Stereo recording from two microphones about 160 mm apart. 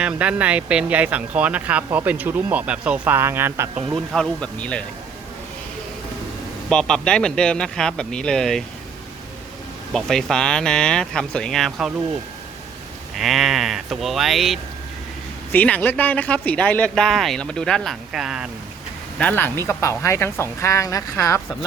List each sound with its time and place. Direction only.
0.0 s speech: 10° right (ahead or behind)
3.9 s speech: centre (ahead or behind)
6.7 s speech: 5° left (ahead or behind)
9.9 s speech: centre (ahead or behind)
13.1 s speech: centre (ahead or behind)
19.2 s speech: 10° left (ahead or behind)